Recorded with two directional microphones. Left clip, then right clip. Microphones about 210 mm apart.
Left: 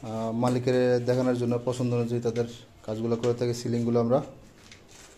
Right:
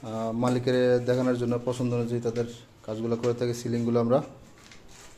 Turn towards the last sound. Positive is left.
turn(degrees=0)  # may be behind; listen again after turning